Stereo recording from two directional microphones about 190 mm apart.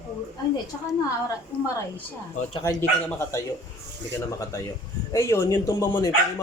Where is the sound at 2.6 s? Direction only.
15° left (ahead or behind).